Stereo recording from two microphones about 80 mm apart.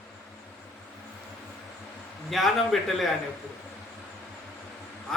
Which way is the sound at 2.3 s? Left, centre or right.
Centre.